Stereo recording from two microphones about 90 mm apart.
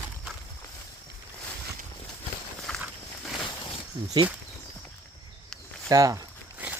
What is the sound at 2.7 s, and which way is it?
Walk, 10° left (ahead or behind).